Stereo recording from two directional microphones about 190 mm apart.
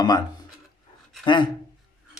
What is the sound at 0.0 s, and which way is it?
Speech, 20° left (ahead or behind).